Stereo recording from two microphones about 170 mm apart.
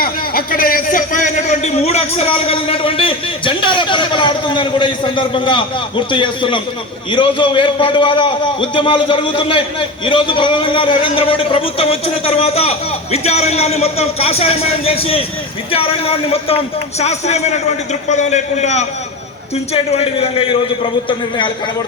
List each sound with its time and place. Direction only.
0.0 s a man's voice: 55° left (ahead or behind); by 21.5 s 30° left (ahead or behind)